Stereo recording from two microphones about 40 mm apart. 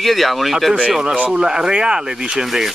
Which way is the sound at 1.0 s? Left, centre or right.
Right.